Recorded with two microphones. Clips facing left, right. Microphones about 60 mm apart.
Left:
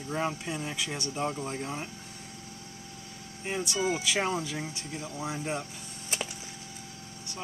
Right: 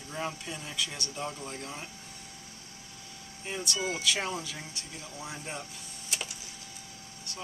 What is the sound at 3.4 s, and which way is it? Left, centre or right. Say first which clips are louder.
Speech: left 4 dB; left.